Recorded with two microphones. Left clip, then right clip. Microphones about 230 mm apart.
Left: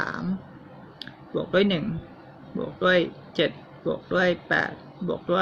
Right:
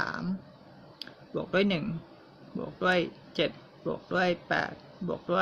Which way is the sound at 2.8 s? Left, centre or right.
Centre.